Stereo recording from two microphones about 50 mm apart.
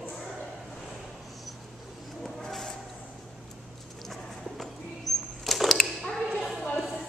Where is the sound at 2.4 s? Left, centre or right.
Centre.